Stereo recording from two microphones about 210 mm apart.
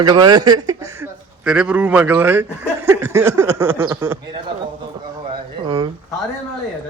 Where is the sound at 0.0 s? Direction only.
20° right (ahead or behind).